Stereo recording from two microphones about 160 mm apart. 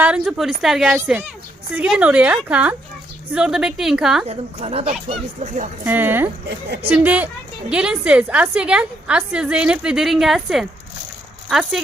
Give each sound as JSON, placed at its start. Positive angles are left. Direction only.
{"t": 0.0, "sound": "a woman's voice", "side_deg": -5}
{"t": 4.3, "sound": "speech", "side_deg": -40}
{"t": 5.8, "sound": "a woman's voice", "side_deg": -10}